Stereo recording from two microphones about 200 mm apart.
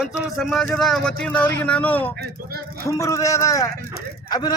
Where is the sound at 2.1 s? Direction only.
50° right (ahead or behind).